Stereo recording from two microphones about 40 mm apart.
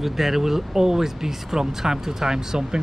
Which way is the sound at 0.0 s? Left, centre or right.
Centre.